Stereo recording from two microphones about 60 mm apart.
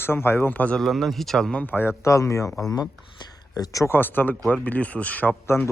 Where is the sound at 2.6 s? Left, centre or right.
Left.